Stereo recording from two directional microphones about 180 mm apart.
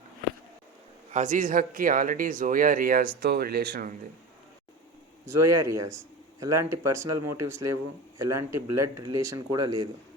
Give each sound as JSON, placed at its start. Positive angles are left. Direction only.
{"t": 1.1, "sound": "speech", "side_deg": -45}
{"t": 5.2, "sound": "speech", "side_deg": -15}